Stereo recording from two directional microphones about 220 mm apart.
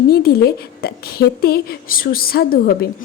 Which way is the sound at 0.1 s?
45° left (ahead or behind).